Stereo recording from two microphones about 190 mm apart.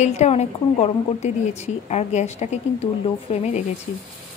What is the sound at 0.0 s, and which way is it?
A woman's voice, 35° left (ahead or behind).